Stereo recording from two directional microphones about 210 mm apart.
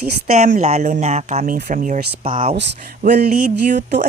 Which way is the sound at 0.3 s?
35° right (ahead or behind).